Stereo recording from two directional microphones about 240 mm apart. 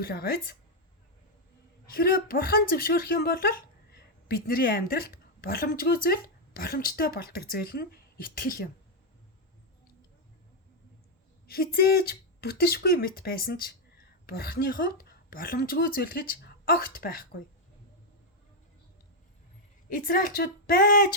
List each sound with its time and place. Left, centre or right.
0.0 s speech: left
1.9 s speech: left
11.4 s speech: left
20.1 s speech: left